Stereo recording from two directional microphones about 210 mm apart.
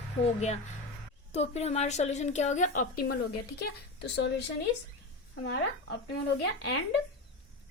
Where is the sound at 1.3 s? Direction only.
30° left (ahead or behind).